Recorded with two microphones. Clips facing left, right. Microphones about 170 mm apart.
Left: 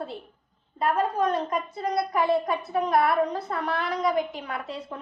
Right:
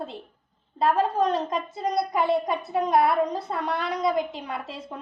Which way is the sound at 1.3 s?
20° right (ahead or behind).